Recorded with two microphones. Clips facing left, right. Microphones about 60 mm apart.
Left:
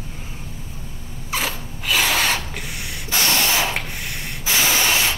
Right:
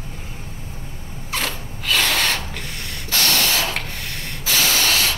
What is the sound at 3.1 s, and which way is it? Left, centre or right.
Spray, centre.